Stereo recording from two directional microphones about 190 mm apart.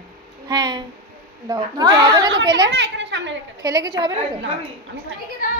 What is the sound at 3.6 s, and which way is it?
Speech, 20° right (ahead or behind).